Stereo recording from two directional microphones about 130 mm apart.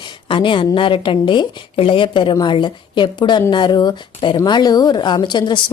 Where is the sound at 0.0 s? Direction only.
40° left (ahead or behind).